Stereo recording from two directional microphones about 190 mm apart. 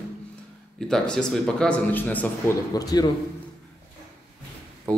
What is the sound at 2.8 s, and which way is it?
Speech, 20° left (ahead or behind).